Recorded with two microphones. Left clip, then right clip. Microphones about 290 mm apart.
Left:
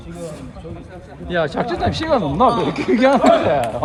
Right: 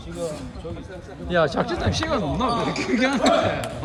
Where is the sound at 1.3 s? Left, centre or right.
Centre.